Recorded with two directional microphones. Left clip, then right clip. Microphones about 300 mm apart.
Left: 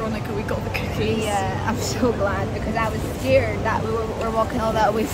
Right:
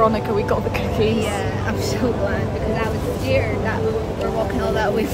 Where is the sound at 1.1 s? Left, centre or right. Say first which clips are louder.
Even; centre.